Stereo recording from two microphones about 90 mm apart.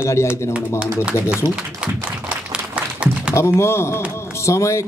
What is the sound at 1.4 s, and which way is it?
Speech, 55° left (ahead or behind).